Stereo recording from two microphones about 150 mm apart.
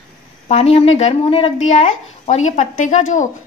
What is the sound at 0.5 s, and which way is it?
Speech, 45° left (ahead or behind).